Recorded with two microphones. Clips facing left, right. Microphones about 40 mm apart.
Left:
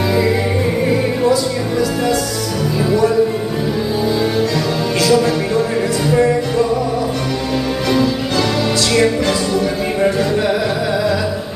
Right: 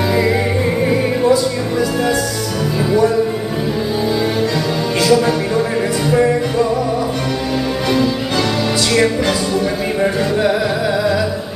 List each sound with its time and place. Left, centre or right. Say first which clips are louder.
1.3 s music: right 1 dB; centre
5.0 s music: right 1 dB; centre